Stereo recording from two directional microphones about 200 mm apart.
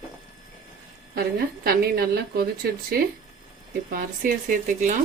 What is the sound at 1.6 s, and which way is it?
Speech, 50° right (ahead or behind).